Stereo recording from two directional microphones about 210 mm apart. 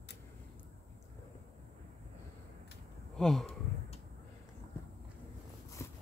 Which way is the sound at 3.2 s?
Centre (ahead or behind).